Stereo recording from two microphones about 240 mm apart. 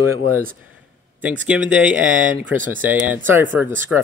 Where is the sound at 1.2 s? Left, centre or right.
Centre.